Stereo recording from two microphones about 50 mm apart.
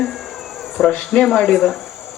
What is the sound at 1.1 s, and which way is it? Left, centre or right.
Speech, centre.